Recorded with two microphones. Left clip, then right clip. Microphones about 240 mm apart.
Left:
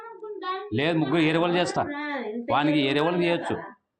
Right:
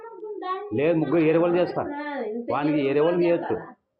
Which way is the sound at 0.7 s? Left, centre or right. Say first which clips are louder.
Right 3 dB; left.